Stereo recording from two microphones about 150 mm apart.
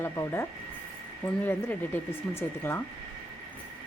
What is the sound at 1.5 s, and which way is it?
Speech, 15° left (ahead or behind).